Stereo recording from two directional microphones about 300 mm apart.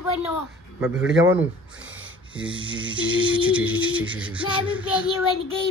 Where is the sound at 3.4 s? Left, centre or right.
Centre.